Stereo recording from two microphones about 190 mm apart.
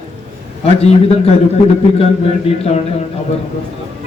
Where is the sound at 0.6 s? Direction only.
30° left (ahead or behind).